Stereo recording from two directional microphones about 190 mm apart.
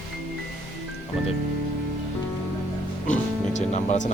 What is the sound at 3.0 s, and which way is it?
Music, 40° left (ahead or behind).